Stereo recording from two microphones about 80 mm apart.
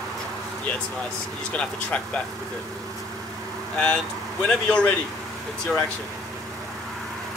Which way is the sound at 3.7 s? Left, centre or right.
Centre.